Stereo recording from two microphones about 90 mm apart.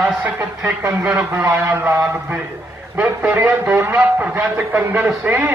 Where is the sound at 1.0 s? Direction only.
15° right (ahead or behind).